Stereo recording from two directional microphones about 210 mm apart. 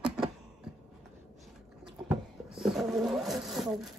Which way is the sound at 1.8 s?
5° right (ahead or behind).